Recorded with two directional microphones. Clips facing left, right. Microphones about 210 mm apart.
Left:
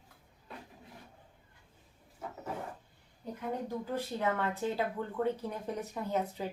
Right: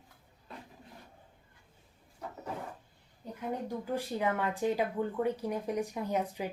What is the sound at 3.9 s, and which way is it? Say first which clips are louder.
Speech: right 2 dB; 10° right (ahead or behind).